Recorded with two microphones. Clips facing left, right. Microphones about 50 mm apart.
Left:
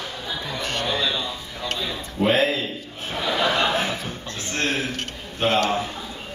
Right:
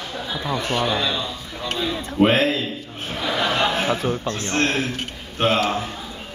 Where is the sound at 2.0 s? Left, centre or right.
Right.